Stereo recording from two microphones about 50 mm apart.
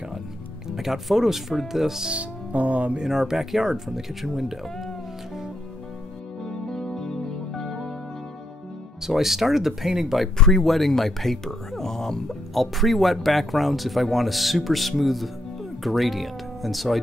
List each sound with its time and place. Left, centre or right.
0.7 s speech: centre
2.0 s music: right
3.0 s speech: centre
6.7 s music: centre
7.6 s music: centre
9.0 s speech: centre
10.3 s speech: centre
10.6 s speech: centre